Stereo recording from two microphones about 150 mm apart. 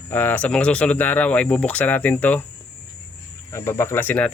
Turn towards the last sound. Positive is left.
turn(degrees=15)  # may be behind; listen again after turning